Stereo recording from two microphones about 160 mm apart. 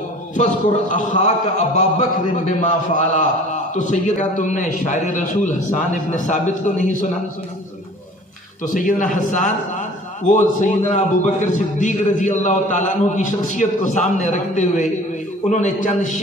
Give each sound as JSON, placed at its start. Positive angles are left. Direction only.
{"t": 0.8, "sound": "a man's voice", "side_deg": 50}
{"t": 8.6, "sound": "a man's voice", "side_deg": 55}